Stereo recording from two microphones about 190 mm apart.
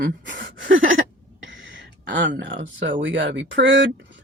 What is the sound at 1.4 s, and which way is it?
Speech, 80° right.